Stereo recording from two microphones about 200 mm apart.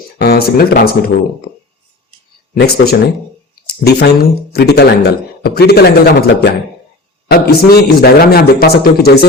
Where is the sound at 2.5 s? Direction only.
50° left (ahead or behind).